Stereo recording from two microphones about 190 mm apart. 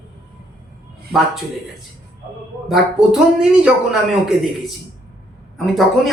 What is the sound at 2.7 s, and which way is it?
Speech, 5° right (ahead or behind).